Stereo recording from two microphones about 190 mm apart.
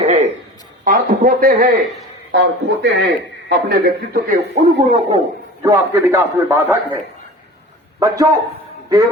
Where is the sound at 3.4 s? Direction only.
50° right (ahead or behind).